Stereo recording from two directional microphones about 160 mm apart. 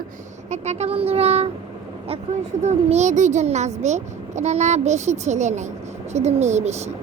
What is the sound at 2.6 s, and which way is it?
A child's voice, 45° right (ahead or behind).